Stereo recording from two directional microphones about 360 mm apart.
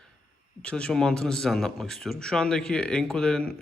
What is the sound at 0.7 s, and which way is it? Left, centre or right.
Speech, centre.